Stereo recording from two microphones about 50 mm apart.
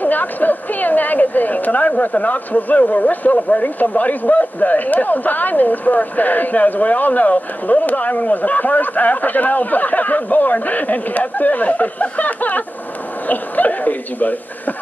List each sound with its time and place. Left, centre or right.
0.0 s a woman's voice: left